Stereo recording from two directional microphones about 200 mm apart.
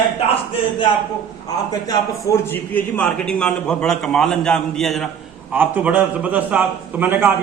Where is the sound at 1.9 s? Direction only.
15° left (ahead or behind).